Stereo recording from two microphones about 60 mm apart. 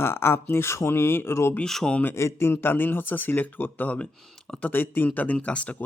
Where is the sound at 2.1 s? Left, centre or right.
Left.